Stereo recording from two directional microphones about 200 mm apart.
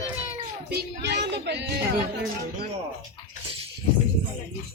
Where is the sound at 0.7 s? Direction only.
55° right (ahead or behind).